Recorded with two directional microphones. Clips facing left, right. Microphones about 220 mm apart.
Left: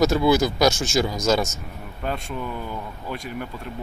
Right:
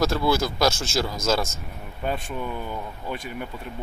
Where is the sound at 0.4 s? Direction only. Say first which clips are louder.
Left 3 dB; centre (ahead or behind).